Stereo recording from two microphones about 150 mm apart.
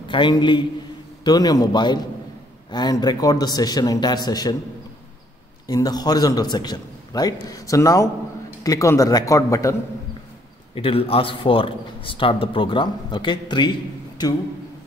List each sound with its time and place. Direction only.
0.1 s a man's voice: 30° left (ahead or behind)
5.7 s a man's voice: 25° left (ahead or behind)
10.7 s a man's voice: 40° left (ahead or behind)